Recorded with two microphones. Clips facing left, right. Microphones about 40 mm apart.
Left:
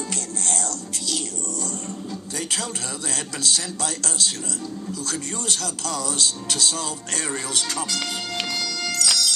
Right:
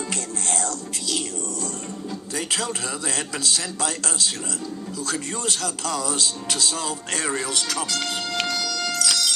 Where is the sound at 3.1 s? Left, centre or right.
Centre.